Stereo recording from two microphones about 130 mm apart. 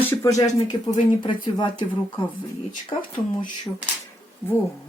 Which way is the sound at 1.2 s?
35° left (ahead or behind).